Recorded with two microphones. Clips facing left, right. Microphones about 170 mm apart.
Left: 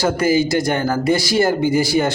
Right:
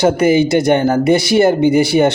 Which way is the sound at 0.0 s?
20° right (ahead or behind).